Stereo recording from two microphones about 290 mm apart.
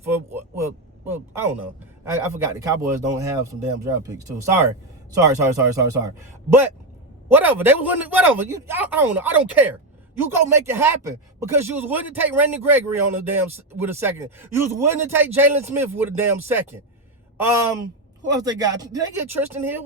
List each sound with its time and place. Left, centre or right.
0.0 s a sound: centre
2.0 s a man's voice: centre
7.3 s a man's voice: centre